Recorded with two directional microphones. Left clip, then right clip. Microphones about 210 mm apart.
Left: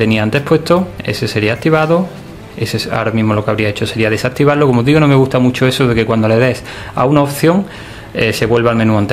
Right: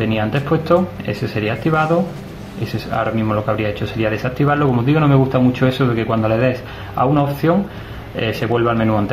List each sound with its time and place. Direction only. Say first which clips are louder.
0.0 s speech: left 6 dB; 55° left (ahead or behind)